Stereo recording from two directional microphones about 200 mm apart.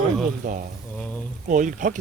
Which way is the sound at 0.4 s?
40° right (ahead or behind).